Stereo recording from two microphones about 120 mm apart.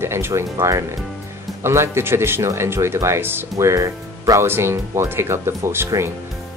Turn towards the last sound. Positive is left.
turn(degrees=-20)  # may be behind; listen again after turning